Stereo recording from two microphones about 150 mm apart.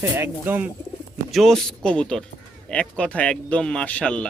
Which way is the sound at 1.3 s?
Centre (ahead or behind).